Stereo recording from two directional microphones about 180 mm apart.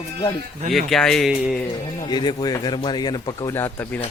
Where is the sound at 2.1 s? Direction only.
25° left (ahead or behind).